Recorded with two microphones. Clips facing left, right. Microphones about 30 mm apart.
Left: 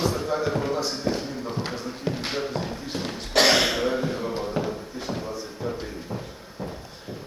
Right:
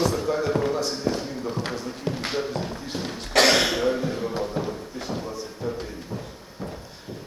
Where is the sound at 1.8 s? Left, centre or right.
Centre.